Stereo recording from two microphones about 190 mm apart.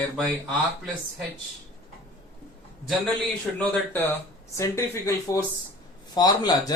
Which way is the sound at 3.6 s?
10° left (ahead or behind).